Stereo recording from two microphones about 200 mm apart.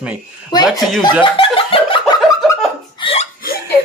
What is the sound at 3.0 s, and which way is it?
Hiccup, 25° left (ahead or behind).